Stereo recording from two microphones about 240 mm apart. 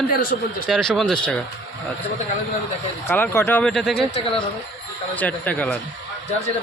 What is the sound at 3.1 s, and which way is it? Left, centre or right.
Speech, centre.